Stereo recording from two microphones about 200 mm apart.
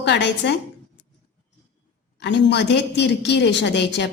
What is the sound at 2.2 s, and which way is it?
Speech, 60° left (ahead or behind).